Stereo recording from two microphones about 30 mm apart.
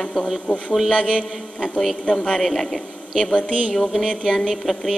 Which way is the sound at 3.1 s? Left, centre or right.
Left.